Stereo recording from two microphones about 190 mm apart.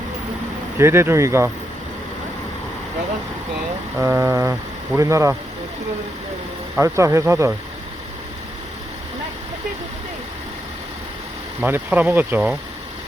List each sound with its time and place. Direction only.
0.8 s speech: 15° right (ahead or behind)
4.0 s speech: 15° right (ahead or behind)
6.7 s speech: 15° right (ahead or behind)
11.6 s speech: 10° right (ahead or behind)